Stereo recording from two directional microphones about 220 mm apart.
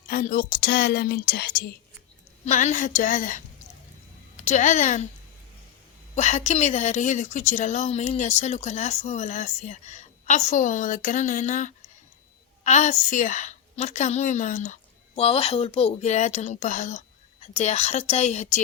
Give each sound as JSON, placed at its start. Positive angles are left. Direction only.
{"t": 0.1, "sound": "a woman's voice", "side_deg": 40}
{"t": 2.4, "sound": "a woman's voice", "side_deg": 35}
{"t": 6.1, "sound": "a woman's voice", "side_deg": 30}